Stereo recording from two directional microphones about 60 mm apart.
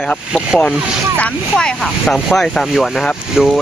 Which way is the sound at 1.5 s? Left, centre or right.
Centre.